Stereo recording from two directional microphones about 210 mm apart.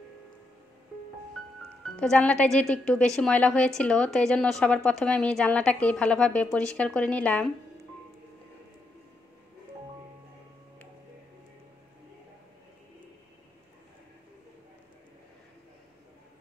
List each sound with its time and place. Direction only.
2.0 s a woman's voice: 5° left (ahead or behind)